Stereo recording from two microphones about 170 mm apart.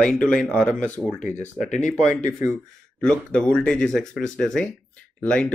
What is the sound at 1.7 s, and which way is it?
Speech, 45° left (ahead or behind).